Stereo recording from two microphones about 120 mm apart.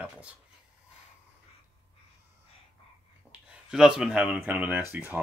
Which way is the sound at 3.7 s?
5° right (ahead or behind).